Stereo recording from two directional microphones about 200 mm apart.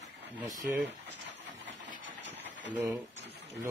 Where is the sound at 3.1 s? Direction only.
60° right (ahead or behind).